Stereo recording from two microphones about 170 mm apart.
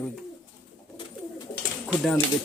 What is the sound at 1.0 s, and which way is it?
Bird, 25° left (ahead or behind).